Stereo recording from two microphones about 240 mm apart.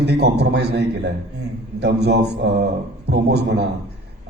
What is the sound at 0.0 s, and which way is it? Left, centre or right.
A man's voice, right.